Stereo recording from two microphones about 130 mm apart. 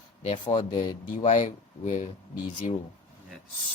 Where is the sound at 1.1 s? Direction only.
70° left (ahead or behind).